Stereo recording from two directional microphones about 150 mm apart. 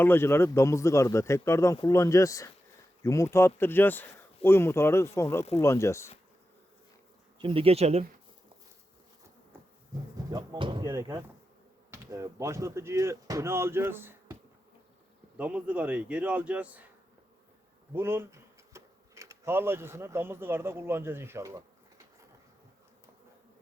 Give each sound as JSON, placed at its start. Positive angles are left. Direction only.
{"t": 0.0, "sound": "speech", "side_deg": 15}
{"t": 7.3, "sound": "speech", "side_deg": -35}
{"t": 9.9, "sound": "speech", "side_deg": -25}
{"t": 15.4, "sound": "a man's voice", "side_deg": -10}
{"t": 17.9, "sound": "speech", "side_deg": -15}